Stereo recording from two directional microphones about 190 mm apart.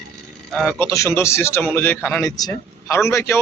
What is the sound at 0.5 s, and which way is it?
A man's voice, 5° left (ahead or behind).